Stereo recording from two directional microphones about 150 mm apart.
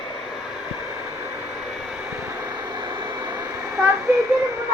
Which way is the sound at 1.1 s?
15° right (ahead or behind).